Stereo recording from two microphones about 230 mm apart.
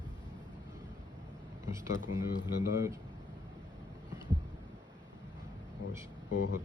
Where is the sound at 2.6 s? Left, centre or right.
Centre.